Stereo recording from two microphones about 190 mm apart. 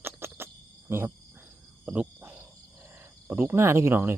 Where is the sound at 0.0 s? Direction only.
10° right (ahead or behind).